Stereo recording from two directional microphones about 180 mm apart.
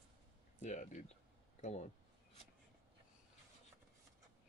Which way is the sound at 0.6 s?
45° left (ahead or behind).